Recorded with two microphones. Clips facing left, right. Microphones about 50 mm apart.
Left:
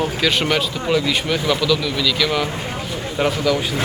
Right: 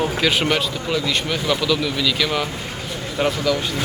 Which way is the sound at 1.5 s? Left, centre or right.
Centre.